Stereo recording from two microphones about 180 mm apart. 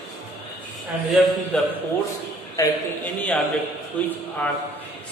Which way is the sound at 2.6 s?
15° left (ahead or behind).